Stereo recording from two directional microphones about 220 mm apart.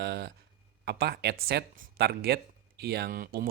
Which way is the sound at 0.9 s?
45° right (ahead or behind).